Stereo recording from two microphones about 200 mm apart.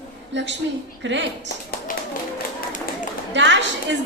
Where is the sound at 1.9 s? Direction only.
45° left (ahead or behind).